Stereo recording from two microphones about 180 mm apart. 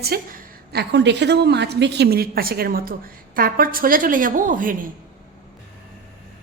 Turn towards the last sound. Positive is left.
turn(degrees=-50)  # may be behind; listen again after turning